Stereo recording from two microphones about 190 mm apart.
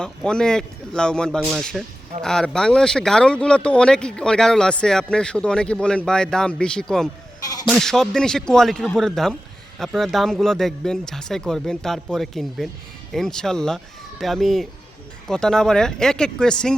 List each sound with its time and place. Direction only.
0.0 s speech: 5° left (ahead or behind)